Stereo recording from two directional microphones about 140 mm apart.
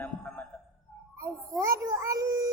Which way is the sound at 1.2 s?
20° right (ahead or behind).